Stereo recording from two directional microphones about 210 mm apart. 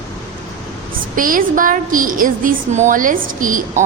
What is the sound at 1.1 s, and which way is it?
A woman's voice, 40° right (ahead or behind).